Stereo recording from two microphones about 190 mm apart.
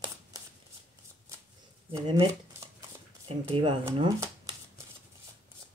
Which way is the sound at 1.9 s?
15° right (ahead or behind).